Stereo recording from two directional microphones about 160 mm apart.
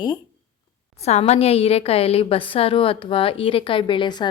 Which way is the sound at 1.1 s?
45° left (ahead or behind).